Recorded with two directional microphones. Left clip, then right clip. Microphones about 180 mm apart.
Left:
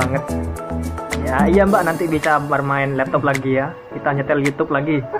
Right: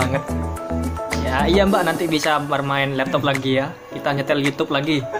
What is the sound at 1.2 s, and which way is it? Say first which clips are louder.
Speech: left 2 dB; 15° right (ahead or behind).